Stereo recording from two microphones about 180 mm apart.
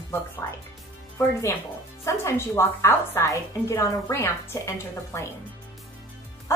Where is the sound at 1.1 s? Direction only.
15° left (ahead or behind).